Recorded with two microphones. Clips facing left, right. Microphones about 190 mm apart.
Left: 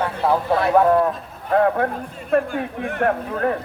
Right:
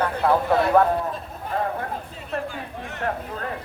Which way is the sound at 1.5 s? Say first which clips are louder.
Left 9 dB; 65° left (ahead or behind).